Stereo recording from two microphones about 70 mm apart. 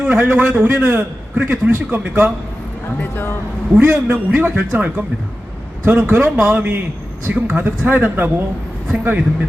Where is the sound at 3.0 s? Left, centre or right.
Left.